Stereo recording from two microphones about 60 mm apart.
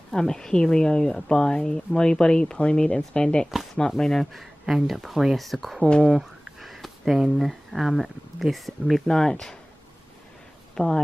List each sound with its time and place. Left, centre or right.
0.1 s speech: centre
3.9 s speech: centre
5.9 s speech: centre
6.1 s a sound: centre
7.2 s speech: centre
9.0 s speech: centre
10.7 s a sound: centre